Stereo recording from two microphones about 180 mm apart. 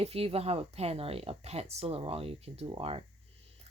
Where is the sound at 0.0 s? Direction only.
35° right (ahead or behind).